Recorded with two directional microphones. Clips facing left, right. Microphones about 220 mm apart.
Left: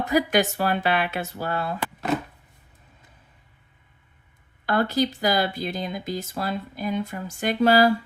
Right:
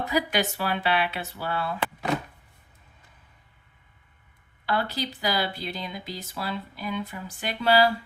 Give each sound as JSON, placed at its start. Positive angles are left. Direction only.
{"t": 0.1, "sound": "speech", "side_deg": 45}
{"t": 4.6, "sound": "speech", "side_deg": 45}